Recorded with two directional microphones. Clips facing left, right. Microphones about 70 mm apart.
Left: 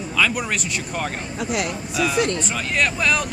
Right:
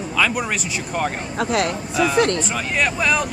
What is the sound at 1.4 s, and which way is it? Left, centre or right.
Speech, right.